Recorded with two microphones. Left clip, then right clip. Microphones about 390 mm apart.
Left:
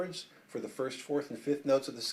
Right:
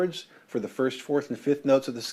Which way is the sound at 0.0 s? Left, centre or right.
Right.